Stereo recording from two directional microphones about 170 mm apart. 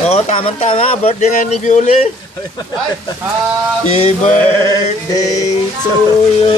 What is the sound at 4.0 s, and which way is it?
Speech, 40° left (ahead or behind).